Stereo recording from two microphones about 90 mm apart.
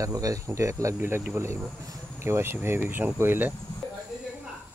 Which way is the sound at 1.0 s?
25° right (ahead or behind).